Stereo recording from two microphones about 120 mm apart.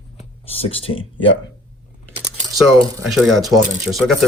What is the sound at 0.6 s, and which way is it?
Speech, 50° left (ahead or behind).